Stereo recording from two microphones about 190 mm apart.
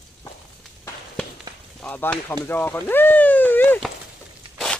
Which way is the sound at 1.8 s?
5° left (ahead or behind).